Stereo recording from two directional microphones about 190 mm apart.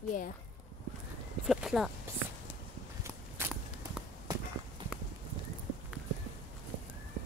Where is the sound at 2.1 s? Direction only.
15° right (ahead or behind).